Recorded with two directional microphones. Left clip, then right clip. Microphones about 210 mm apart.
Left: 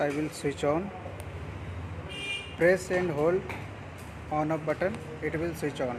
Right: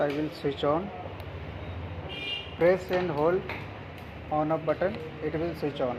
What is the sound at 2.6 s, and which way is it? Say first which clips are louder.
Speech: even; 20° left (ahead or behind).